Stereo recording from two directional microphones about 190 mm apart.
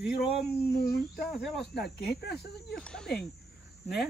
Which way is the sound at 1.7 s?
60° left (ahead or behind).